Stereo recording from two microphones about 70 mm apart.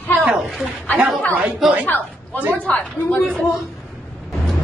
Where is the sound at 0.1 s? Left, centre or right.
Centre.